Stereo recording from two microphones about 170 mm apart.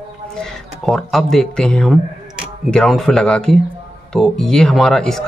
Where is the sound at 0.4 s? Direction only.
Centre (ahead or behind).